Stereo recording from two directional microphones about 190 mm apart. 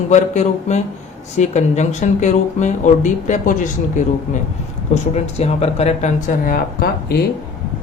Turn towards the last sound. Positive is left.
turn(degrees=50)  # may be behind; listen again after turning